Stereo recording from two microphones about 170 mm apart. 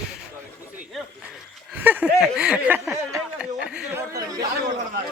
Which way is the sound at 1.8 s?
10° right (ahead or behind).